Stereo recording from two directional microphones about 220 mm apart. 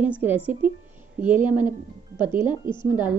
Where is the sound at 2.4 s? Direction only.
20° left (ahead or behind).